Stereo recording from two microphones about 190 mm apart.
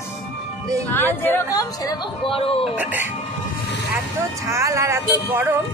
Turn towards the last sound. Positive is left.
turn(degrees=-10)  # may be behind; listen again after turning